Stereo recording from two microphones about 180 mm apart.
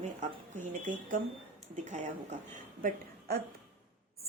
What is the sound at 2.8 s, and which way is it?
Speech, 50° right (ahead or behind).